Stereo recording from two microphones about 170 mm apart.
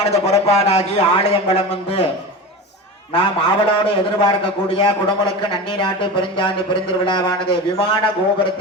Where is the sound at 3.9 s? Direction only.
30° left (ahead or behind).